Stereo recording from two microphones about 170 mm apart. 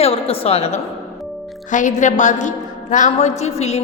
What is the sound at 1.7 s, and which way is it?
A man's voice, 45° left (ahead or behind).